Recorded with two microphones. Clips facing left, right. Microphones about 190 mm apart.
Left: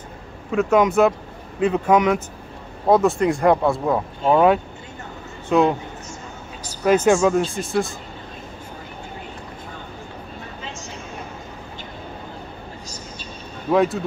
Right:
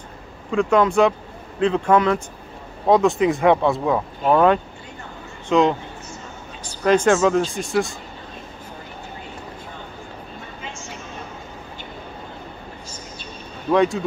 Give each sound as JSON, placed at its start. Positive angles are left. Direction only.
{"t": 0.5, "sound": "a man's voice", "side_deg": 5}
{"t": 6.8, "sound": "speech", "side_deg": 5}
{"t": 13.7, "sound": "speech", "side_deg": 5}